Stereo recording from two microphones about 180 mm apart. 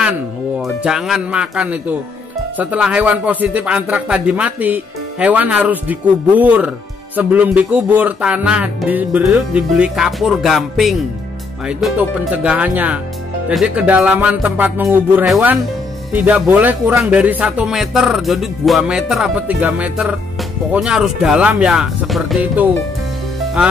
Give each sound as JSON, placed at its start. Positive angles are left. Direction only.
{"t": 0.6, "sound": "speech", "side_deg": 0}